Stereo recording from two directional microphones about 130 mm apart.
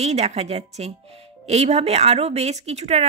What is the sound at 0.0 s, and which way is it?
A woman's voice, 55° right (ahead or behind).